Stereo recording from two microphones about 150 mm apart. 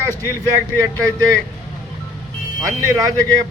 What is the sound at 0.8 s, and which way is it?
Speech, 25° right (ahead or behind).